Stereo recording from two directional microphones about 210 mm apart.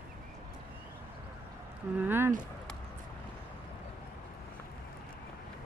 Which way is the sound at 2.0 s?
10° right (ahead or behind).